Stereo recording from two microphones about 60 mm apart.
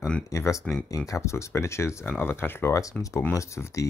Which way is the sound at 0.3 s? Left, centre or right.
Left.